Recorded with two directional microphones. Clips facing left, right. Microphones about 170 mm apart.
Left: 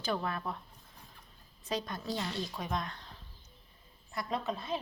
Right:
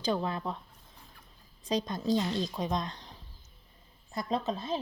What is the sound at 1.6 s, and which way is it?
A woman's voice, 20° right (ahead or behind).